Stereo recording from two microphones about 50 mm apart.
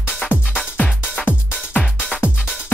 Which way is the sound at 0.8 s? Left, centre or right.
Left.